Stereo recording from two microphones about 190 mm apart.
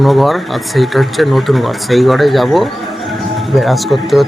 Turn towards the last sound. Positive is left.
turn(degrees=0)  # may be behind; listen again after turning